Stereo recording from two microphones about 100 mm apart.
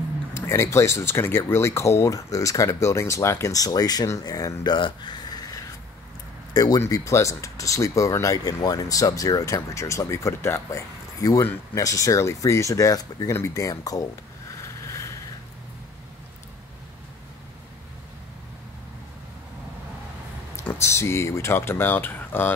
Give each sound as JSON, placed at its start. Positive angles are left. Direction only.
{"t": 0.3, "sound": "speech", "side_deg": 25}
{"t": 4.7, "sound": "a sound", "side_deg": 50}
{"t": 6.5, "sound": "speech", "side_deg": 40}
{"t": 20.5, "sound": "speech", "side_deg": 25}